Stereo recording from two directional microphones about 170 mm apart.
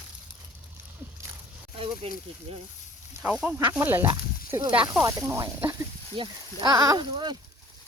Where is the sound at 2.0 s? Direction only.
35° right (ahead or behind).